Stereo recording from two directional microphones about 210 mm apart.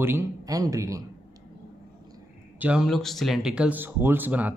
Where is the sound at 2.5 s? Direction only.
5° right (ahead or behind).